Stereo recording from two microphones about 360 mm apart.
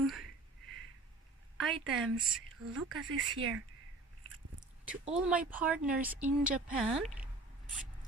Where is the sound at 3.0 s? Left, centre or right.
Right.